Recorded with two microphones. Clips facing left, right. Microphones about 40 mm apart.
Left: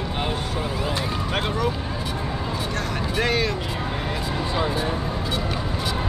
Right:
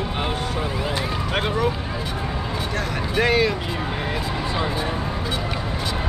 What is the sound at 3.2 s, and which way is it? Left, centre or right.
Speech, centre.